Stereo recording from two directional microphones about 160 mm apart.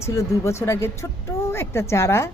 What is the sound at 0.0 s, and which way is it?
Speech, 15° left (ahead or behind).